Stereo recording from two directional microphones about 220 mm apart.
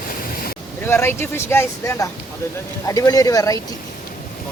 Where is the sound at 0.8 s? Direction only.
10° left (ahead or behind).